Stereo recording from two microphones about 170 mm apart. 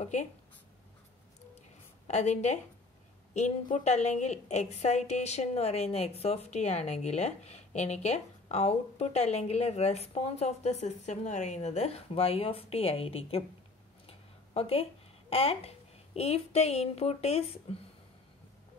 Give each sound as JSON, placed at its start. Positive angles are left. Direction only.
{"t": 0.0, "sound": "speech", "side_deg": 45}
{"t": 2.0, "sound": "a woman's voice", "side_deg": 40}